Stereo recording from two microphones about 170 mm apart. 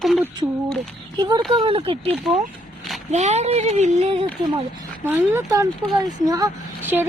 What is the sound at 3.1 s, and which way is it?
Speech, 40° right (ahead or behind).